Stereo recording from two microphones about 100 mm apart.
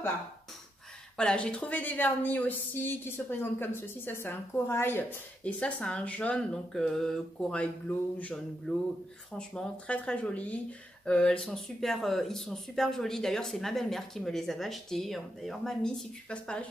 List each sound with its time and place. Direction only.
1.1 s a woman's voice: 10° left (ahead or behind)